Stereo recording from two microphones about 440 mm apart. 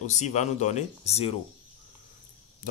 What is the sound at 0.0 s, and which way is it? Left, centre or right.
Speech, centre.